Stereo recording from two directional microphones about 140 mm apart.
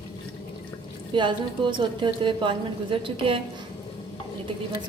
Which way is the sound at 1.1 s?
35° right (ahead or behind).